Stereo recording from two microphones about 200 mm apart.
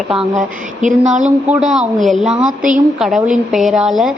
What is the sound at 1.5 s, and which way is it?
A woman's voice, 5° right (ahead or behind).